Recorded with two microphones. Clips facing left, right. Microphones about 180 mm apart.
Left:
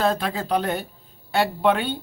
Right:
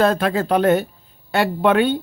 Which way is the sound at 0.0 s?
65° right (ahead or behind).